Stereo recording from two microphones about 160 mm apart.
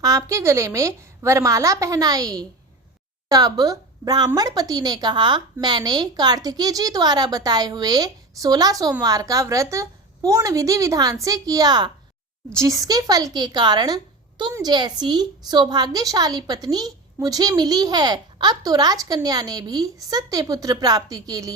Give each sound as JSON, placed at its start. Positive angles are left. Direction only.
{"t": 0.0, "sound": "a woman's voice", "side_deg": -20}